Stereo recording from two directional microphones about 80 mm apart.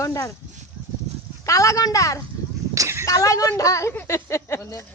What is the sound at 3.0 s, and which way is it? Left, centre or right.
Speech, left.